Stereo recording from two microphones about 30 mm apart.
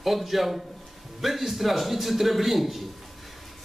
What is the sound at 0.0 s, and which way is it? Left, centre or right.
A man's voice, centre.